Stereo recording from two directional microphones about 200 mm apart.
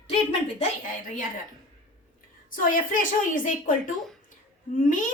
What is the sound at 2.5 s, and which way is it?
A woman's voice, 40° left (ahead or behind).